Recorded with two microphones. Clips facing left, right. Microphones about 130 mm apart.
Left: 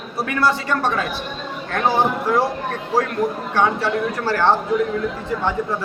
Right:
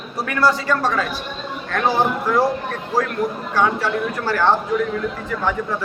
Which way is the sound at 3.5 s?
30° left (ahead or behind).